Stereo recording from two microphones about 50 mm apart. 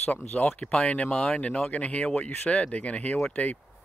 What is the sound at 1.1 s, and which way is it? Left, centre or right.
Speech, centre.